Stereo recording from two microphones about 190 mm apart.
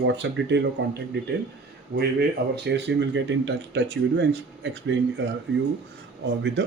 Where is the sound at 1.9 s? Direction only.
60° right (ahead or behind).